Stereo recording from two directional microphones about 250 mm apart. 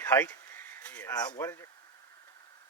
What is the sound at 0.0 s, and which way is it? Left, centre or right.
Speech, centre.